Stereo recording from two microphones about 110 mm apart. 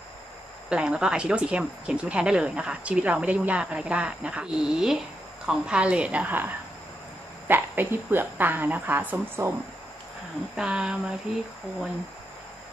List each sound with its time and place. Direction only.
0.7 s speech: 10° right (ahead or behind)
10.5 s speech: 10° right (ahead or behind)